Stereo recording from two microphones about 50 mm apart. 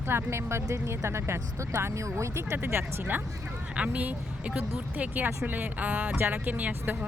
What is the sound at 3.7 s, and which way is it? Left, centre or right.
Speech, right.